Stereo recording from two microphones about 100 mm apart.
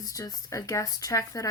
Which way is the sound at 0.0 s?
35° left (ahead or behind).